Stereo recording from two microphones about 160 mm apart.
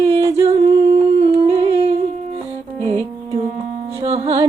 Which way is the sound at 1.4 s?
35° right (ahead or behind).